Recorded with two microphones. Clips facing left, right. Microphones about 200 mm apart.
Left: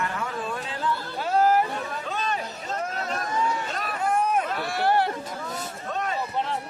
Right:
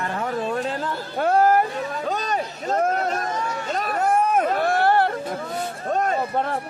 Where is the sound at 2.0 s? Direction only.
40° right (ahead or behind).